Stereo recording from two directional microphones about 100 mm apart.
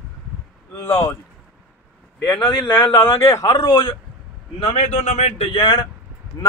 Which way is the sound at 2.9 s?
20° left (ahead or behind).